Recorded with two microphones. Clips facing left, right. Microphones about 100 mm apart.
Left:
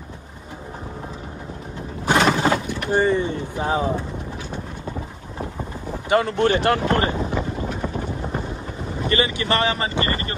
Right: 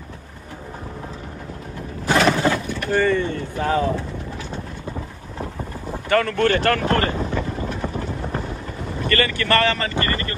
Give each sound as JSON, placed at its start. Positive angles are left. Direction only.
{"t": 2.0, "sound": "vehicle", "side_deg": 20}
{"t": 6.0, "sound": "speech", "side_deg": 20}
{"t": 9.0, "sound": "speech", "side_deg": 20}